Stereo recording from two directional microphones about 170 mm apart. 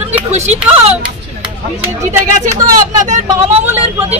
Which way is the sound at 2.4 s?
45° right (ahead or behind).